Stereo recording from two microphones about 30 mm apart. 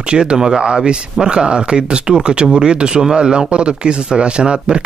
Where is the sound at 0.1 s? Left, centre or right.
Right.